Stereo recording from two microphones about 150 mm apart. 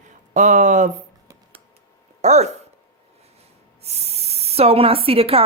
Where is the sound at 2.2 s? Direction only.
50° right (ahead or behind).